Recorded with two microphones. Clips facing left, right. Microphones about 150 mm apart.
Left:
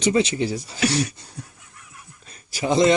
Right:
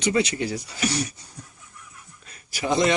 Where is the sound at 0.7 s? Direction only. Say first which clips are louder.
Left 5 dB; 90° left.